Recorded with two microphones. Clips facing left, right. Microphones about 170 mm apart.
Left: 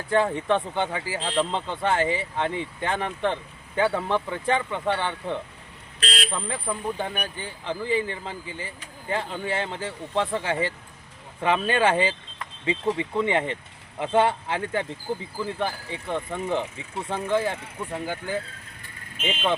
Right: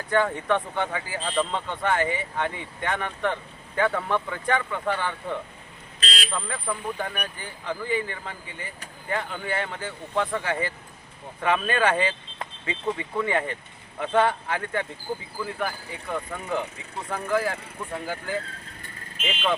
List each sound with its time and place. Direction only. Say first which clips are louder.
0.1 s speech: left 1 dB; 25° left (ahead or behind)
6.0 s vehicle: left 3 dB; 60° left (ahead or behind)
6.3 s speech: left 1 dB; 25° left (ahead or behind)